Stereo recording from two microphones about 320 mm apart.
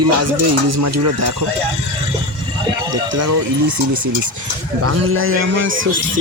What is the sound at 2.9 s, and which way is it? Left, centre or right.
Speech, right.